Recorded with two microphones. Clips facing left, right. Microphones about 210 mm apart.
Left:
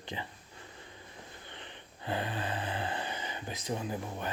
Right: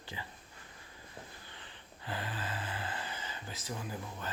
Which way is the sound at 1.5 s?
20° left (ahead or behind).